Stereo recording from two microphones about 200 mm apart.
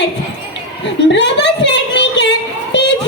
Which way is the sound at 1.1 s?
60° left (ahead or behind).